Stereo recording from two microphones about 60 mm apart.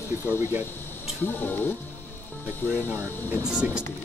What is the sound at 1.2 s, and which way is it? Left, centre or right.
Speech, left.